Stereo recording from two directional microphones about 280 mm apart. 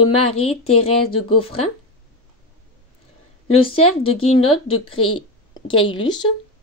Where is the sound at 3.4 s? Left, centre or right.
Centre.